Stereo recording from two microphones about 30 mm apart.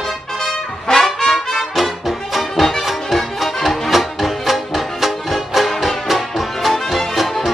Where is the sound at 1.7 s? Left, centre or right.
Centre.